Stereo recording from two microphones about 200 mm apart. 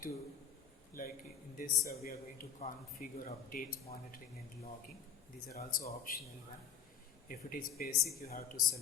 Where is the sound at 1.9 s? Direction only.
50° left (ahead or behind).